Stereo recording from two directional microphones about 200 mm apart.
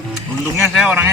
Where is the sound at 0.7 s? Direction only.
5° right (ahead or behind).